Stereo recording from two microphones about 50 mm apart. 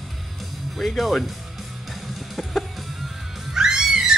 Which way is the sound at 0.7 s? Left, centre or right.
Centre.